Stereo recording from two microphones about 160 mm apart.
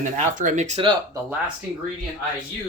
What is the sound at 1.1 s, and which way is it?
Speech, 10° right (ahead or behind).